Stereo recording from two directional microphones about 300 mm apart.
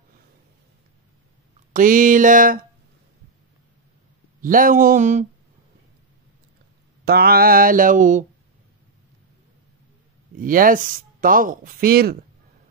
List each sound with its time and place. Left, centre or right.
1.7 s speech: right
4.4 s speech: right
7.1 s speech: right
10.3 s speech: right